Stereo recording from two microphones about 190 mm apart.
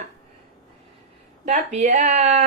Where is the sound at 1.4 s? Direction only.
40° right (ahead or behind).